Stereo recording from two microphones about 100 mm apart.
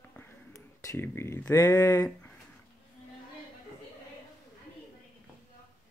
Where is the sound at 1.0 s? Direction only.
25° left (ahead or behind).